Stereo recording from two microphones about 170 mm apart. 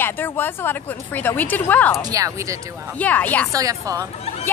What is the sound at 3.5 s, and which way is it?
Speech, 20° right (ahead or behind).